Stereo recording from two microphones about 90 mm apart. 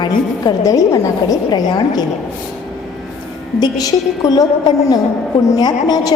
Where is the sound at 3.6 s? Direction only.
45° left (ahead or behind).